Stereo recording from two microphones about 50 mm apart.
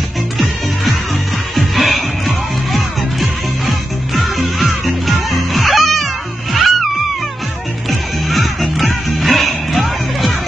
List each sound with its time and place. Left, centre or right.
1.5 s music: centre
8.3 s music: centre